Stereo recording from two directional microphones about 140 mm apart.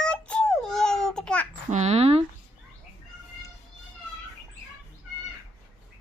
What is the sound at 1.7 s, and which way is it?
Speech, 50° right (ahead or behind).